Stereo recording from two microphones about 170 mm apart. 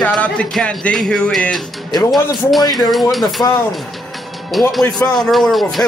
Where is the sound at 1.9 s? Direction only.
25° left (ahead or behind).